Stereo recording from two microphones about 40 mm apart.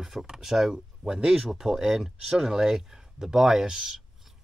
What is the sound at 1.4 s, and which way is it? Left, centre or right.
Speech, centre.